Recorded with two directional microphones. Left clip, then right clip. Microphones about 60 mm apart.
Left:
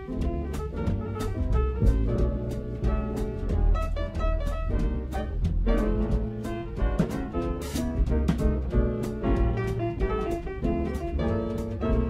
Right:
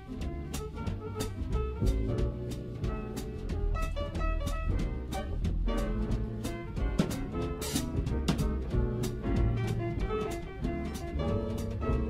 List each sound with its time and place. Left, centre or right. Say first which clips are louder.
1.6 s music: left 4 dB; right
5.7 s music: left 8 dB; right